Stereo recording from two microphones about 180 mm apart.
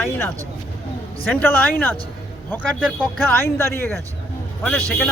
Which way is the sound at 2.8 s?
10° left (ahead or behind).